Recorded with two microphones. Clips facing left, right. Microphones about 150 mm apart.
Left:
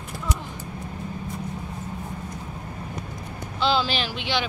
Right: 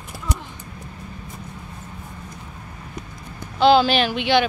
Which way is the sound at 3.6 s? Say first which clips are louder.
Right 8 dB; 60° right (ahead or behind).